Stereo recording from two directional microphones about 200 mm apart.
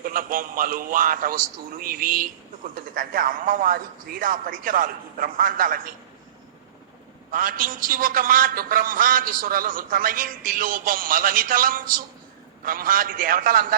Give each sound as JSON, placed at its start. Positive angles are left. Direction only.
{"t": 0.0, "sound": "a man's voice", "side_deg": -45}
{"t": 7.3, "sound": "a man's voice", "side_deg": -45}